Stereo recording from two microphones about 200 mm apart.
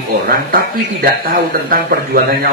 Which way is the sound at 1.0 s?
50° right (ahead or behind).